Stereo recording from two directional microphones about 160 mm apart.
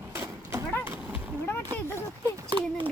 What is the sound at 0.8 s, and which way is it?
Horse, 15° right (ahead or behind).